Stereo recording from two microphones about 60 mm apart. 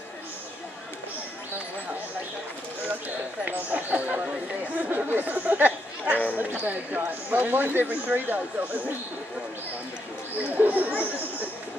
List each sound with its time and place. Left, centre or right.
3.4 s speech: right
4.7 s chatter: right
6.3 s speech: right
10.5 s speech: right